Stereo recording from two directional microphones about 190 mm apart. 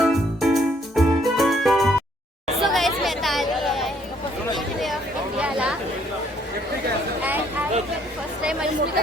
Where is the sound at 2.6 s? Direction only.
Centre (ahead or behind).